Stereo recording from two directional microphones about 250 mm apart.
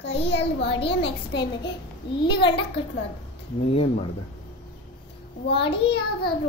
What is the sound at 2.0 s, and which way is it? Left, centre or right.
Speech, left.